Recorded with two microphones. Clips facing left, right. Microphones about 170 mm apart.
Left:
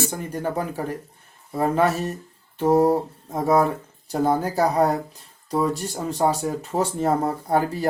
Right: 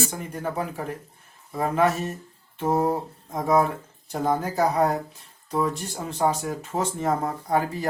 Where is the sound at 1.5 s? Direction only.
35° left (ahead or behind).